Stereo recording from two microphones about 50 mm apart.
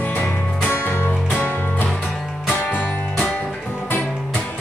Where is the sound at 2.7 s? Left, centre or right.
Left.